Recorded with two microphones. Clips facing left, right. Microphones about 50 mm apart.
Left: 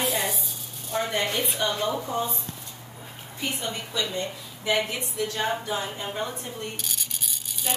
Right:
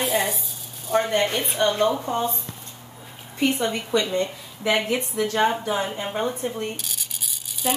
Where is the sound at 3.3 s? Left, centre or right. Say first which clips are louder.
Right 9 dB; right.